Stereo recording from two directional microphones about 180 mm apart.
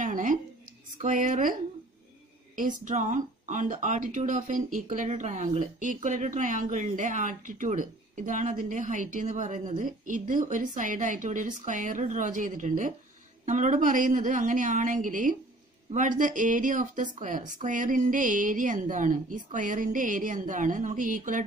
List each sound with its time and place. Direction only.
0.0 s a sound: 45° right (ahead or behind)
1.0 s speech: 45° right (ahead or behind)
2.8 s speech: 45° right (ahead or behind)